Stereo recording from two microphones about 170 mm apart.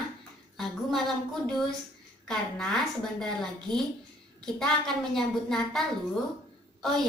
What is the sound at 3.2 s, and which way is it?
Speech, 5° left (ahead or behind).